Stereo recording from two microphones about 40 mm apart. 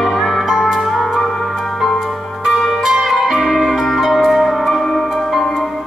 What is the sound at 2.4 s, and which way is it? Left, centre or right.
Zither, centre.